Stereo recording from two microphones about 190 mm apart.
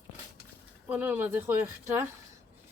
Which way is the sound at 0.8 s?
10° right (ahead or behind).